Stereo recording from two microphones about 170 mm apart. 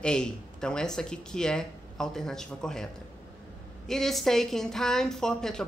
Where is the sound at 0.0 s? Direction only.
5° left (ahead or behind).